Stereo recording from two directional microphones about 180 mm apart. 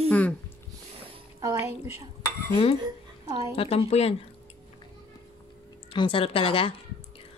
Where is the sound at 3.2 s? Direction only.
15° right (ahead or behind).